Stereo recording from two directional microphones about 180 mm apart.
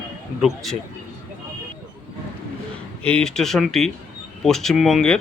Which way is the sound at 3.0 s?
5° left (ahead or behind).